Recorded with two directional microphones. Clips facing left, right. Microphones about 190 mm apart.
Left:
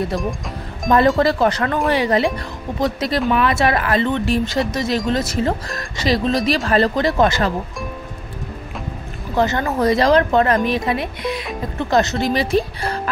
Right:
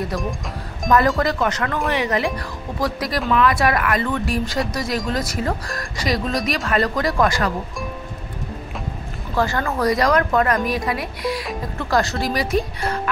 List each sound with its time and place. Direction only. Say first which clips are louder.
0.8 s speech: left 3 dB; 30° left (ahead or behind)
9.3 s speech: left 3 dB; 20° left (ahead or behind)